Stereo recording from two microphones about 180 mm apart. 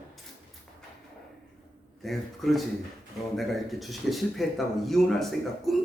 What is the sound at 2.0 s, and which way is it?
Speech, centre (ahead or behind).